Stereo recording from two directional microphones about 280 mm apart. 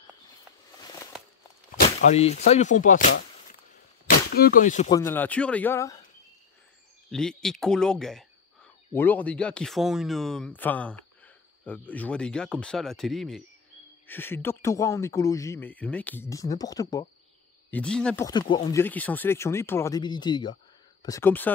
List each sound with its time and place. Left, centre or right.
0.7 s a sound: centre
2.0 s speech: left
4.3 s speech: left
4.9 s speech: centre
7.1 s speech: centre